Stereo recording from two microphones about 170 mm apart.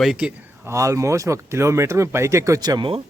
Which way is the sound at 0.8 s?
20° right (ahead or behind).